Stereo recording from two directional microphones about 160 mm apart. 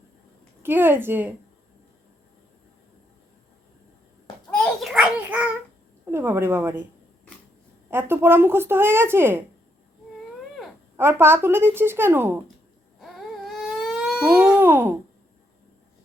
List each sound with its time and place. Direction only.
0.6 s speech: 15° right (ahead or behind)
4.5 s a sound: centre (ahead or behind)
6.1 s speech: 15° right (ahead or behind)
7.9 s speech: 15° right (ahead or behind)
10.9 s speech: 15° right (ahead or behind)
13.7 s baby cry: centre (ahead or behind)